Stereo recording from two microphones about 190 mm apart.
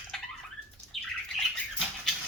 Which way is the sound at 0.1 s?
Centre (ahead or behind).